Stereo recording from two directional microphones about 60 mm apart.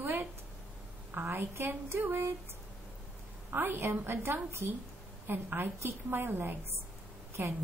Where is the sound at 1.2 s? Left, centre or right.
Right.